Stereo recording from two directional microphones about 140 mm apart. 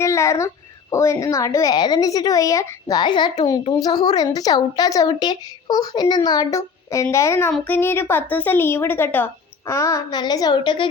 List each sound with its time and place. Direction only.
0.0 s a child's voice: 20° left (ahead or behind)